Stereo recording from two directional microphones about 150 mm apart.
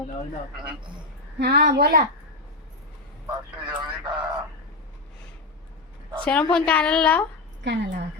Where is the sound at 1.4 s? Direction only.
90° right.